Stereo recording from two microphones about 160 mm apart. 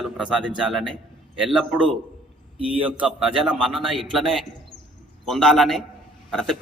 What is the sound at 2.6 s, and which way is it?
Speech, 35° right (ahead or behind).